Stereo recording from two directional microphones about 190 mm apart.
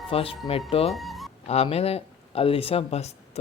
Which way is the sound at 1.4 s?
30° left (ahead or behind).